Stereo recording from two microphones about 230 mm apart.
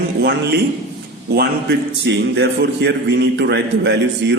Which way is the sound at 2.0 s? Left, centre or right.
Right.